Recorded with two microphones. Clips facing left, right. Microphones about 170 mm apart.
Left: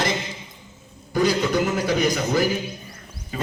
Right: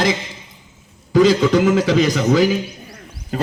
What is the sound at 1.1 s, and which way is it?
A man's voice, 90° right.